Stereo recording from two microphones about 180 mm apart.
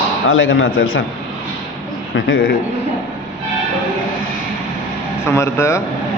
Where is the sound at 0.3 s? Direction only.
90° left.